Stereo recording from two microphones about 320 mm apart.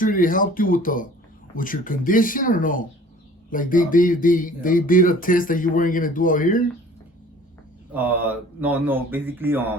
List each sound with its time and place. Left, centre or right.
0.0 s speech: left
7.9 s speech: centre